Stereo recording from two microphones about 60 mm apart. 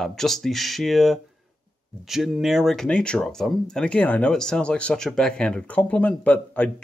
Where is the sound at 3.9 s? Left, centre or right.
Left.